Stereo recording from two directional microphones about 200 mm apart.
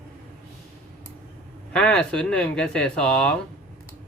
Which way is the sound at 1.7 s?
5° left (ahead or behind).